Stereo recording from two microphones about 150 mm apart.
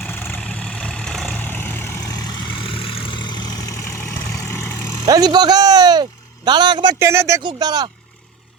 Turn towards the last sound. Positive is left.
turn(degrees=-25)  # may be behind; listen again after turning